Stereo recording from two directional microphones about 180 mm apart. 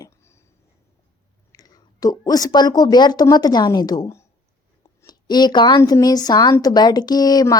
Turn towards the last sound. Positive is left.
turn(degrees=20)  # may be behind; listen again after turning